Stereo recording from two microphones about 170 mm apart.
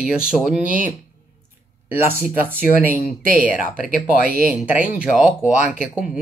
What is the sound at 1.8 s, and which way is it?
Speech, 15° right (ahead or behind).